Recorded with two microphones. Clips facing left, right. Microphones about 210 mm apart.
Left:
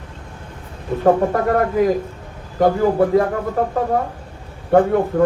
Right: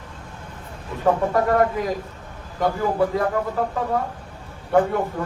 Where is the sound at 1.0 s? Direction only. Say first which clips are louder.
Left 4 dB; 50° left (ahead or behind).